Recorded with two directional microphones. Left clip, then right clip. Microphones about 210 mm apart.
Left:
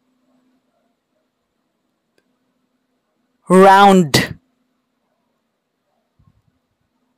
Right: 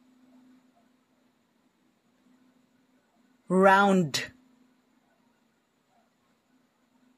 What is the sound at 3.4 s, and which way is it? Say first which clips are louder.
Speech: left 13 dB; 55° left (ahead or behind).